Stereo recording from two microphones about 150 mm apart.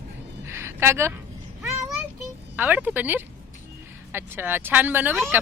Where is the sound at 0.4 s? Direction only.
15° right (ahead or behind).